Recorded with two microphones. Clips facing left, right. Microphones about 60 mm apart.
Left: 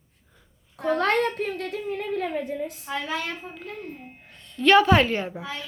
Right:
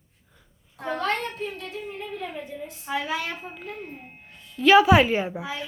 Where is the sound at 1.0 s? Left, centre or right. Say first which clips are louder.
Left 4 dB; left.